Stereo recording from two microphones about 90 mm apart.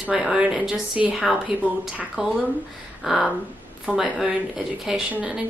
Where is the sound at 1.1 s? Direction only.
Centre (ahead or behind).